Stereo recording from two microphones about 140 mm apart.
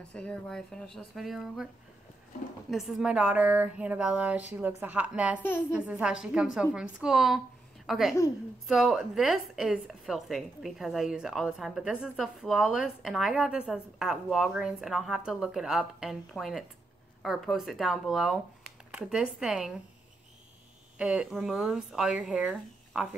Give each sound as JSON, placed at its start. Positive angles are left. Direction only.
{"t": 0.1, "sound": "a woman's voice", "side_deg": 5}
{"t": 2.7, "sound": "a woman's voice", "side_deg": 0}
{"t": 21.0, "sound": "speech", "side_deg": -5}